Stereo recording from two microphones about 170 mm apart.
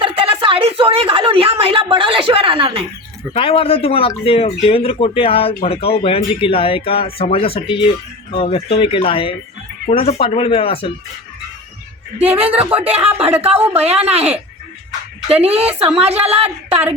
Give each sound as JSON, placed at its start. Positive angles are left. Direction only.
{"t": 0.0, "sound": "a woman's voice", "side_deg": -30}
{"t": 3.3, "sound": "speech", "side_deg": 35}
{"t": 12.5, "sound": "speech", "side_deg": -10}
{"t": 13.7, "sound": "a woman's voice", "side_deg": -35}